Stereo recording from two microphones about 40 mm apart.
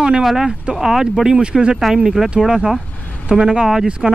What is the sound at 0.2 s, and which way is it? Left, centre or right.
Speech, centre.